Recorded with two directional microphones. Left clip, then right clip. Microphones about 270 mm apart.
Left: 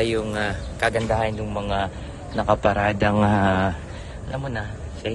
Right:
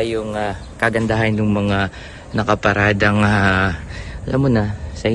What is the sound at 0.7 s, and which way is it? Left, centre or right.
A man's voice, right.